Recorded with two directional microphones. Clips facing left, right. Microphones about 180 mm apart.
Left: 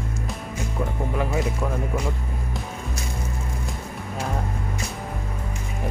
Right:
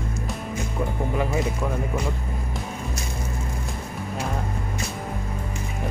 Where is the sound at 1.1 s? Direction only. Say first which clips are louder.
Even; centre (ahead or behind).